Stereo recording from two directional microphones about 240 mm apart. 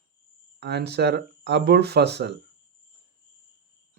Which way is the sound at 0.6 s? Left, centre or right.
Right.